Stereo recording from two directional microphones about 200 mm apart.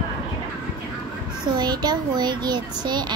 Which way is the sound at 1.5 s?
20° right (ahead or behind).